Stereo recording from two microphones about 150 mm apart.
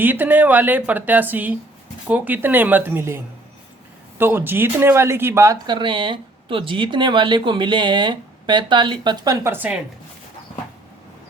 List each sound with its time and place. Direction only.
0.0 s a woman's voice: 10° right (ahead or behind)